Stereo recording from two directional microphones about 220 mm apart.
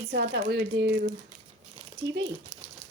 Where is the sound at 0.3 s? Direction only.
50° right (ahead or behind).